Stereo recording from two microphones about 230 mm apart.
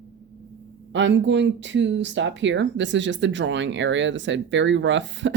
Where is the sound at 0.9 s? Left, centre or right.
Right.